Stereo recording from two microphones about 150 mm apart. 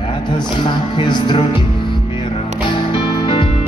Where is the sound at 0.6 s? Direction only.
30° left (ahead or behind).